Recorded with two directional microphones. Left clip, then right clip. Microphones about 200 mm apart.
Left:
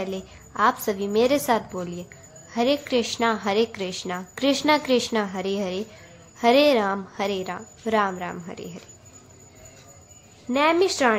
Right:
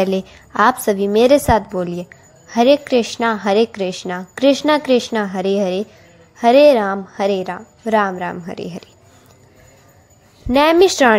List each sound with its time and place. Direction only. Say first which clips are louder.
0.0 s a woman's voice: right 13 dB; 35° right (ahead or behind)
10.5 s a woman's voice: right 8 dB; 35° right (ahead or behind)